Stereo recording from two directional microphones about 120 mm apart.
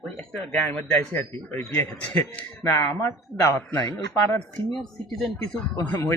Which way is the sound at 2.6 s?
30° left (ahead or behind).